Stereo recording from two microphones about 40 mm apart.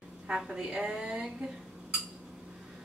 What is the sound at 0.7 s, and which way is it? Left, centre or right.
Speech, right.